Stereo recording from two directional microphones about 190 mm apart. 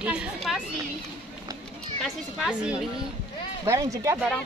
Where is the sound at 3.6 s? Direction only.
15° right (ahead or behind).